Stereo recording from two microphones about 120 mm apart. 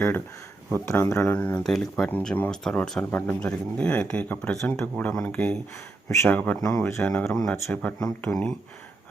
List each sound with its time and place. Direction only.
1.0 s speech: 25° left (ahead or behind)
1.4 s speech: 10° left (ahead or behind)
2.0 s speech: 15° left (ahead or behind)
3.0 s speech: 15° left (ahead or behind)